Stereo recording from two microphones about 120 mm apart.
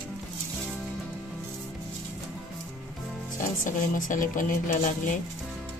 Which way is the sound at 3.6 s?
90° left.